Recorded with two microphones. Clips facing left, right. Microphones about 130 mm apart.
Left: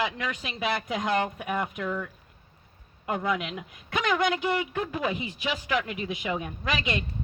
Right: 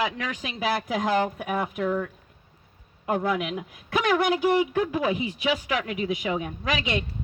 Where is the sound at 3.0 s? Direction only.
5° right (ahead or behind).